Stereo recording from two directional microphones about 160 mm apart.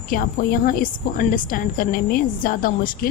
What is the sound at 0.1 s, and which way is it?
A woman's voice, 65° left (ahead or behind).